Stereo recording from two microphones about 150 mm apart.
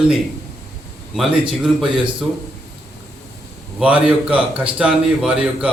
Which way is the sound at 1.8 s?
35° right (ahead or behind).